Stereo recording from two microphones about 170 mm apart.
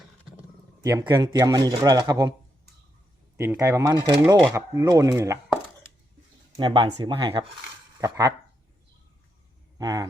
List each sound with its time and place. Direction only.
0.8 s speech: 20° right (ahead or behind)
3.3 s speech: 15° right (ahead or behind)
6.6 s speech: 30° right (ahead or behind)
9.7 s speech: 20° right (ahead or behind)